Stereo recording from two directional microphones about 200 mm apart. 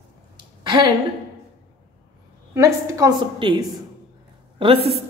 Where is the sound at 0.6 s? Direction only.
20° right (ahead or behind).